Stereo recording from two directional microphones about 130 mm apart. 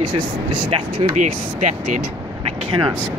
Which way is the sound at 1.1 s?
65° right (ahead or behind).